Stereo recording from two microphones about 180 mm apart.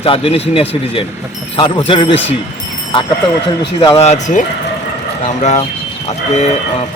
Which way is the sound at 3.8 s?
30° left (ahead or behind).